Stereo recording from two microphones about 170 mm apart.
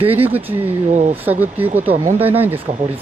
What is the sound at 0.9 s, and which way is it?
Speech, 45° right (ahead or behind).